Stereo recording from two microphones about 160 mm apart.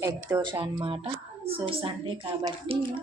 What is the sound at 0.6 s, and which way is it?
A woman's voice, 30° right (ahead or behind).